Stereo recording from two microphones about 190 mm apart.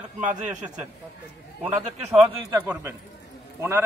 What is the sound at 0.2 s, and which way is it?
Speech, 40° right (ahead or behind).